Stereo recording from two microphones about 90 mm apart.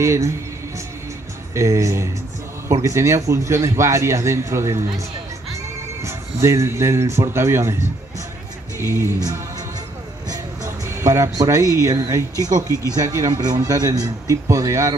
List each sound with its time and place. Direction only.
0.0 s a man's voice: 35° right (ahead or behind)
1.5 s a man's voice: 35° right (ahead or behind)
6.0 s a man's voice: 30° right (ahead or behind)
10.3 s a man's voice: 35° right (ahead or behind)